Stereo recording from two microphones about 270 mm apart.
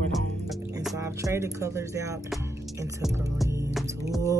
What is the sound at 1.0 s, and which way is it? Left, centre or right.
Speech, centre.